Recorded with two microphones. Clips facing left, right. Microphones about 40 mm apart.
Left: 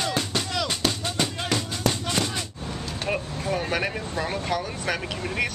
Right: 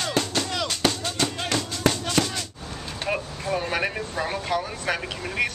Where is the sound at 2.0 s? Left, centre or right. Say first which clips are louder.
Right 2 dB; centre.